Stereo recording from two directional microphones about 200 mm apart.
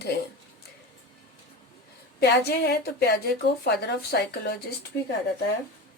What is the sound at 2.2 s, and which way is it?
Speech, 55° left (ahead or behind).